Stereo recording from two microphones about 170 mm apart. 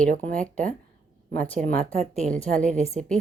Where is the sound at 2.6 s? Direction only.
40° right (ahead or behind).